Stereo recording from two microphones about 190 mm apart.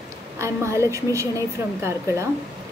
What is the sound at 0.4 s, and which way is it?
A woman's voice, 15° right (ahead or behind).